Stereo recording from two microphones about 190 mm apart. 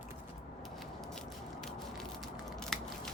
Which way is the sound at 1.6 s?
Centre (ahead or behind).